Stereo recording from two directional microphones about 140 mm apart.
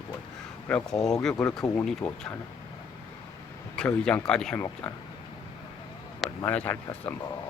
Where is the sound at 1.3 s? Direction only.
20° left (ahead or behind).